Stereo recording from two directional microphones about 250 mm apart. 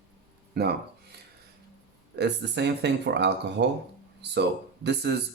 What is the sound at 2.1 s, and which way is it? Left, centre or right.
Speech, right.